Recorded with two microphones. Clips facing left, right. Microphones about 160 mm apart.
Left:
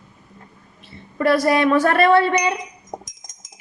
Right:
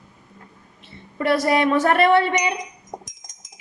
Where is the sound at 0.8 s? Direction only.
20° right (ahead or behind).